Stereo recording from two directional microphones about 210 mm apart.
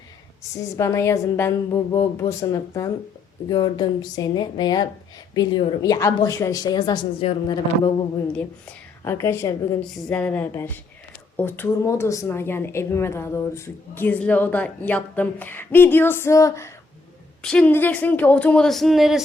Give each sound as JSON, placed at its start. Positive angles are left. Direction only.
{"t": 0.8, "sound": "a woman's voice", "side_deg": 15}
{"t": 9.0, "sound": "a woman's voice", "side_deg": 10}